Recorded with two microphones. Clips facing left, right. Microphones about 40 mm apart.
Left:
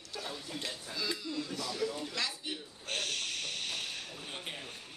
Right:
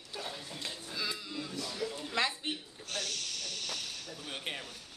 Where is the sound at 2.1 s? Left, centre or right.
Right.